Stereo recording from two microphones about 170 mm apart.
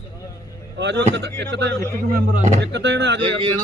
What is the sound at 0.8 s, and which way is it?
Speech, 90° right.